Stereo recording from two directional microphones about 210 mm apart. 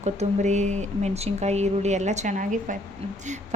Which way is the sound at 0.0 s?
35° right (ahead or behind).